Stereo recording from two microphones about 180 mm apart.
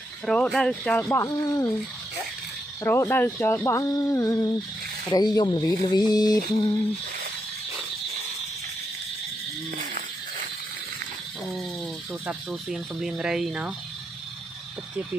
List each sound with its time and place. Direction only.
0.3 s speech: 5° left (ahead or behind)
2.8 s speech: 15° left (ahead or behind)
12.5 s speech: centre (ahead or behind)